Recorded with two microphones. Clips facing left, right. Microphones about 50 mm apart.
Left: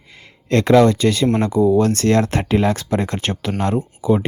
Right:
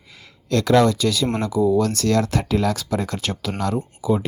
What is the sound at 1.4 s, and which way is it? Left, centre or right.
Speech, left.